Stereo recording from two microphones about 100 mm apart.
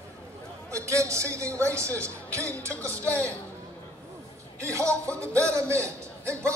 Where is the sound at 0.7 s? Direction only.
30° right (ahead or behind).